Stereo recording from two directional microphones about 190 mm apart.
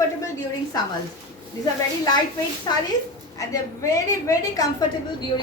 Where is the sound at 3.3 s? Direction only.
15° left (ahead or behind).